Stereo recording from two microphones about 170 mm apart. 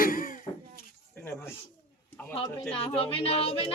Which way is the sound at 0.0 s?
55° left (ahead or behind).